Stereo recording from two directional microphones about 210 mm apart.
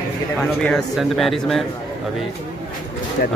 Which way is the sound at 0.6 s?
5° left (ahead or behind).